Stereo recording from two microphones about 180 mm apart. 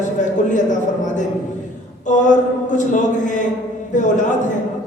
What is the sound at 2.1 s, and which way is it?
A man's voice, 45° left (ahead or behind).